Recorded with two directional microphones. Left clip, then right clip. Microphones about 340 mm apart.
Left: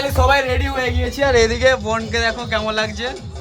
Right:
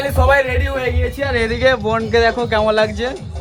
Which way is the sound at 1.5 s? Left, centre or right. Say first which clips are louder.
Right 1 dB; centre.